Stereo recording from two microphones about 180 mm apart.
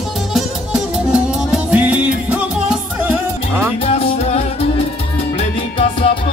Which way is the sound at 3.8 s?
35° left (ahead or behind).